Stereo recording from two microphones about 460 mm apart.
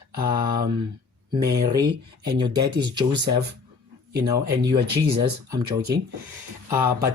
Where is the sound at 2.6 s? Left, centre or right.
Centre.